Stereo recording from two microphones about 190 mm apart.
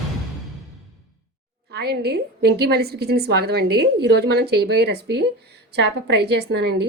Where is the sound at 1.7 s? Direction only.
55° right (ahead or behind).